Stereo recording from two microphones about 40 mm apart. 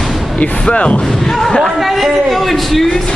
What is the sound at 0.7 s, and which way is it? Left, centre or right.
Speech, left.